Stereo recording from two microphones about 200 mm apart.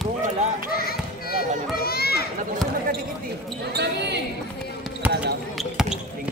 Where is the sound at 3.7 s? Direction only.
55° right (ahead or behind).